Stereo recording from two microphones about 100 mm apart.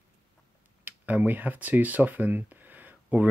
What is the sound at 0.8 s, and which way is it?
Speech, 15° right (ahead or behind).